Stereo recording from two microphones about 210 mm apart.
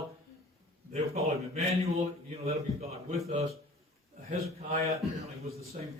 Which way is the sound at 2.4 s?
30° right (ahead or behind).